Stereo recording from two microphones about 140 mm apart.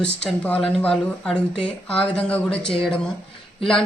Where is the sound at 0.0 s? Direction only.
10° left (ahead or behind).